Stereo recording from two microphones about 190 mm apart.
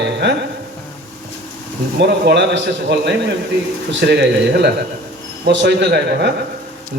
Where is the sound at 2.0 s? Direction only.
65° right (ahead or behind).